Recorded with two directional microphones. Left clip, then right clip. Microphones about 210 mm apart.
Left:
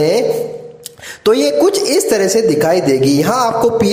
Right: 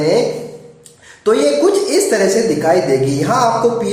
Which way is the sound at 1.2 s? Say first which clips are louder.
Left 1 dB; 40° left (ahead or behind).